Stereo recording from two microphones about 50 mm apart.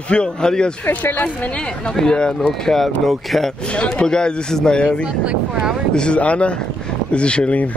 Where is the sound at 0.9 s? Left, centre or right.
Left.